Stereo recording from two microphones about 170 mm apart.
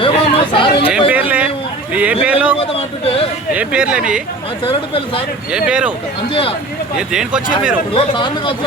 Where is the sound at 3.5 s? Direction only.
5° right (ahead or behind).